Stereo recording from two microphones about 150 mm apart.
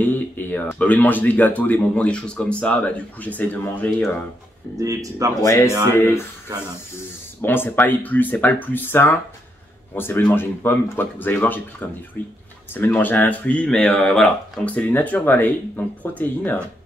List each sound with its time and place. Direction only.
0.0 s speech: 10° left (ahead or behind)
4.7 s speech: 20° right (ahead or behind)
5.4 s speech: 20° left (ahead or behind)
7.4 s speech: 15° left (ahead or behind)